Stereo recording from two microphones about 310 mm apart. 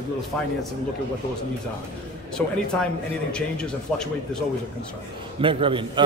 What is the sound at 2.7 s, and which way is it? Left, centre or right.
Speech, centre.